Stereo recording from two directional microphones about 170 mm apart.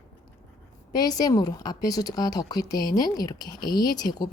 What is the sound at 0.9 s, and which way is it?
A woman's voice, 25° left (ahead or behind).